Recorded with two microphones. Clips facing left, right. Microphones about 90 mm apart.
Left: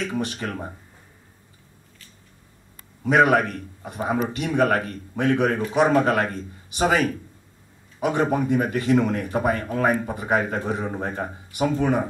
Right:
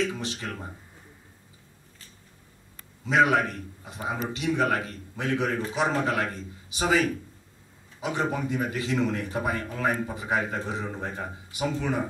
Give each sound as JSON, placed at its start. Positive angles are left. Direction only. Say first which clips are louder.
{"t": 0.0, "sound": "speech", "louder": "left 3 dB", "side_deg": 55}
{"t": 3.0, "sound": "a man's voice", "louder": "left 4 dB", "side_deg": 55}